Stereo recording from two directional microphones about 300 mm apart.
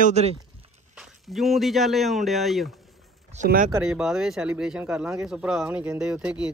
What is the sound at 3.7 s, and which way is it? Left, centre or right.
Speech, centre.